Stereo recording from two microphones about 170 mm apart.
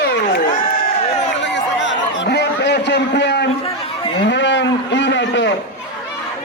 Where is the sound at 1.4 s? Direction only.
90° left.